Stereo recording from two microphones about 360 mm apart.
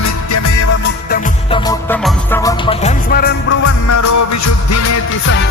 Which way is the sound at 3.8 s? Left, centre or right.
Left.